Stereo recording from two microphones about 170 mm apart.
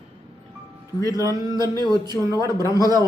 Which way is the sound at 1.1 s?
20° right (ahead or behind).